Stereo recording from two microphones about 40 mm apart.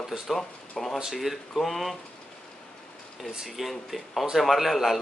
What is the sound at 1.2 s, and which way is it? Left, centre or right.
Speech, centre.